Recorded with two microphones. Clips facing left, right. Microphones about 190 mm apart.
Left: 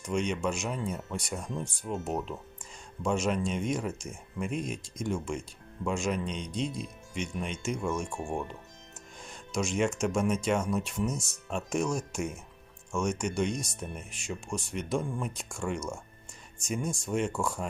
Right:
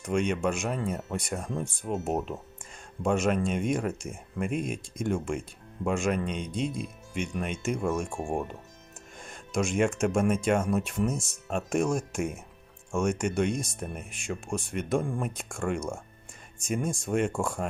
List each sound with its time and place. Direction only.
0.1 s speech: 55° right (ahead or behind)
8.2 s speech: 35° right (ahead or behind)
9.2 s speech: 50° right (ahead or behind)